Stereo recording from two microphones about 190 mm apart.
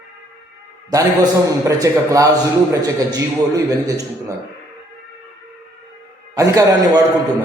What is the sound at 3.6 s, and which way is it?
Speech, 20° right (ahead or behind).